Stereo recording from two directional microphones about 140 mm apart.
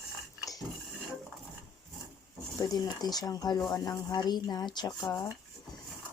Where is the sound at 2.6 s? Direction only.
25° left (ahead or behind).